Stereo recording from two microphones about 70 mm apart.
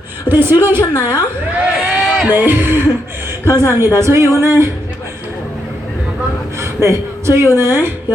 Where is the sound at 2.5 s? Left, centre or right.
Right.